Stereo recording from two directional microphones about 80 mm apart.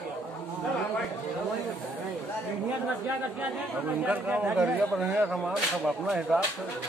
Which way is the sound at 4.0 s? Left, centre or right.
Centre.